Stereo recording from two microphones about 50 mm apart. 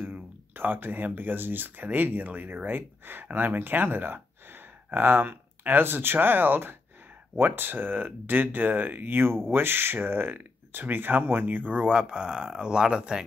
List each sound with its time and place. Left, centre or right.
0.0 s speech: right
11.8 s speech: centre